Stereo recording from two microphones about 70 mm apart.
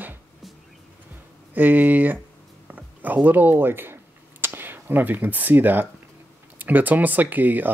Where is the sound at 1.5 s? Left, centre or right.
Right.